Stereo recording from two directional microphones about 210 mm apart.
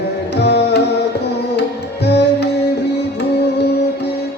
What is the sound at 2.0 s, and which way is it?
Music, 55° left (ahead or behind).